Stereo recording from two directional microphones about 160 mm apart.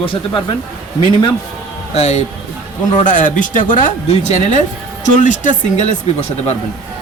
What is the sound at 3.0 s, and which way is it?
Speech, 55° left (ahead or behind).